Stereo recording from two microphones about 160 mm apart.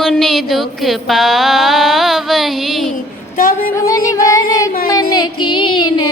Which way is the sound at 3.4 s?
60° left (ahead or behind).